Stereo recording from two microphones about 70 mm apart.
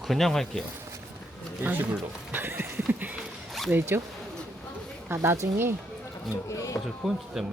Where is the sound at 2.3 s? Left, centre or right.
Right.